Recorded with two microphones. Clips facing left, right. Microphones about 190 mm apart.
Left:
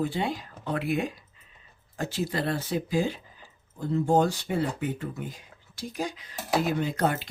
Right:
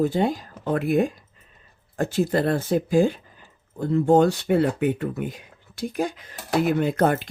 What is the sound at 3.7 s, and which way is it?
Speech, 60° right (ahead or behind).